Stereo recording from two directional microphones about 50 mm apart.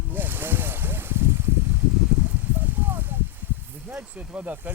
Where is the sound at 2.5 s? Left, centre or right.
Right.